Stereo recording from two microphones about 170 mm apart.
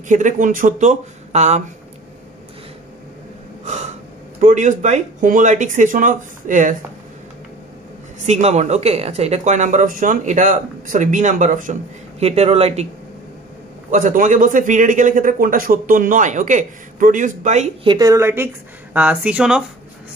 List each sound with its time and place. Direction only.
0.1 s a man's voice: 50° right (ahead or behind)
3.6 s gasp: 45° right (ahead or behind)
4.4 s a man's voice: 50° right (ahead or behind)
8.3 s a man's voice: 40° right (ahead or behind)
12.2 s speech: 40° right (ahead or behind)
13.8 s a man's voice: 50° right (ahead or behind)
17.8 s a woman's voice: 20° right (ahead or behind); by 19.6 s 5° right (ahead or behind)